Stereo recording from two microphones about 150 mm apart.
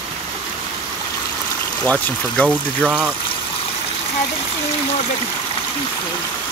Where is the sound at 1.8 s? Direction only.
10° left (ahead or behind).